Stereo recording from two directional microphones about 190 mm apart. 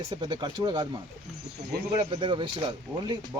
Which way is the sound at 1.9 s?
25° right (ahead or behind).